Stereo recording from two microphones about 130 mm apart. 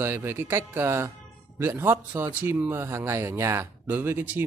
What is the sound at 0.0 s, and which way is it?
A man's voice, 20° right (ahead or behind).